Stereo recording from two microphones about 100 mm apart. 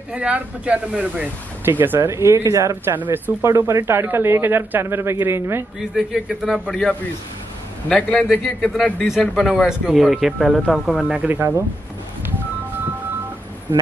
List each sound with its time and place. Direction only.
0.1 s speech: 10° right (ahead or behind)
1.8 s speech: 25° right (ahead or behind)
2.9 s speech: 20° right (ahead or behind)
5.8 s a man's voice: 5° right (ahead or behind)